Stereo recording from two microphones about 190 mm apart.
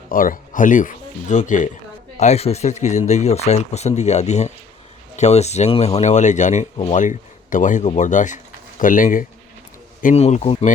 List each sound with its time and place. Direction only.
0.1 s speech: 45° left (ahead or behind)